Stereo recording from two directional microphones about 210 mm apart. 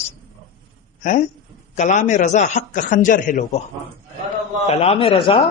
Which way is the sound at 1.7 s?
35° left (ahead or behind).